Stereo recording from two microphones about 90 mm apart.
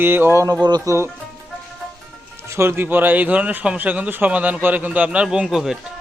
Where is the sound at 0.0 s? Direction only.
25° right (ahead or behind).